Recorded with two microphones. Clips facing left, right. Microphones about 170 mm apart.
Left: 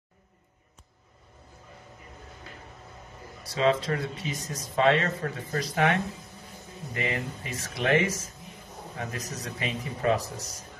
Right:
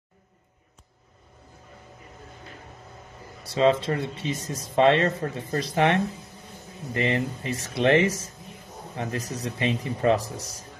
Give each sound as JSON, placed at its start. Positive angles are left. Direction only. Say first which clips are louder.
{"t": 3.4, "sound": "speech", "louder": "right 4 dB", "side_deg": -25}
{"t": 10.3, "sound": "speech", "louder": "right 3 dB", "side_deg": 0}